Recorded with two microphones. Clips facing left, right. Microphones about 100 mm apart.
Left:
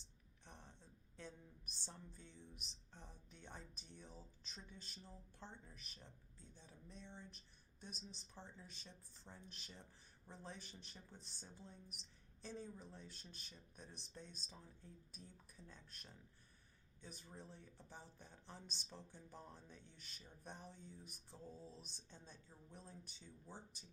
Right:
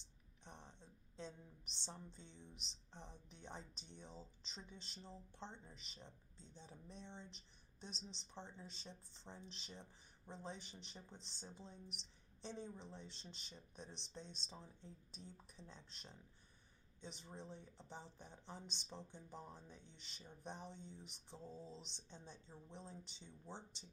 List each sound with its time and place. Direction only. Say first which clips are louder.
0.4 s a woman's voice: right 3 dB; 20° right (ahead or behind)